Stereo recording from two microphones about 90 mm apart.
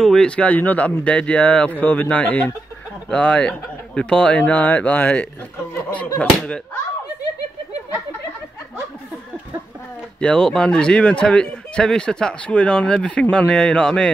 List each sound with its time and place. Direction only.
0.0 s speech: 5° left (ahead or behind)
10.2 s speech: 10° left (ahead or behind)